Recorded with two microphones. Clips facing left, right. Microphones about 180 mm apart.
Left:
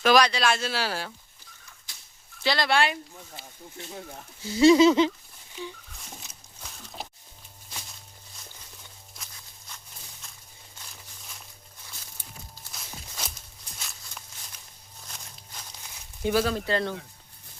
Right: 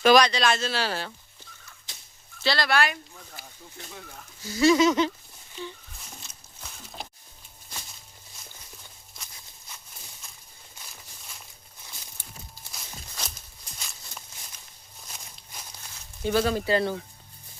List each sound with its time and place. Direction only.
0.0 s speech: 5° left (ahead or behind)
1.9 s a sound: 25° right (ahead or behind)
2.4 s speech: 20° left (ahead or behind)
5.6 s speech: 10° left (ahead or behind)
6.6 s a sound: centre (ahead or behind)
10.8 s a sound: 10° right (ahead or behind)
12.7 s walk: 5° left (ahead or behind)
15.0 s walk: 5° right (ahead or behind)
16.2 s speech: 5° left (ahead or behind)